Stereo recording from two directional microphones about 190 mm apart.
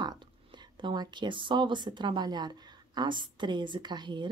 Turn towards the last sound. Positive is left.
turn(degrees=-25)  # may be behind; listen again after turning